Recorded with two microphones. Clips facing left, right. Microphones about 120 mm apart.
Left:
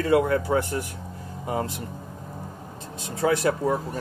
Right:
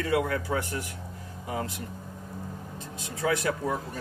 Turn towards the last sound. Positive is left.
turn(degrees=35)  # may be behind; listen again after turning